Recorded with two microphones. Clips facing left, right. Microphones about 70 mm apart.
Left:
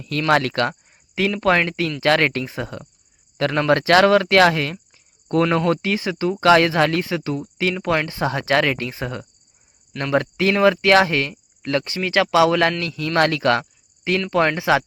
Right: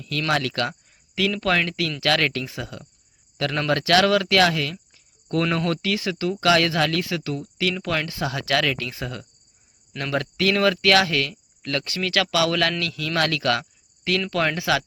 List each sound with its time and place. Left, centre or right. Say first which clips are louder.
0.0 s speech: left 5 dB; left
5.3 s speech: left 5 dB; left